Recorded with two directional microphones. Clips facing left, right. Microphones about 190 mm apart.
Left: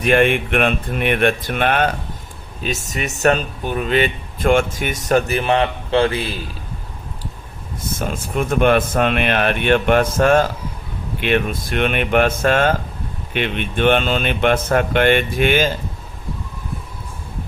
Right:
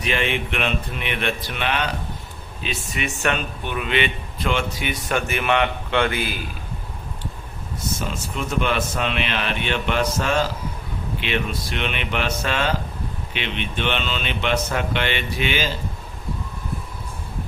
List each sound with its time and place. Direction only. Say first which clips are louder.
0.0 s speech: left 9 dB; 50° left (ahead or behind); by 6.4 s 30° left (ahead or behind)
7.9 s speech: left 4 dB; 50° left (ahead or behind)